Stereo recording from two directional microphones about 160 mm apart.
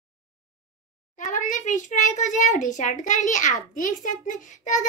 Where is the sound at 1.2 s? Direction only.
50° left (ahead or behind).